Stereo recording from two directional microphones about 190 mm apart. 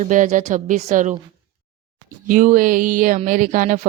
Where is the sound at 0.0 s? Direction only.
40° right (ahead or behind).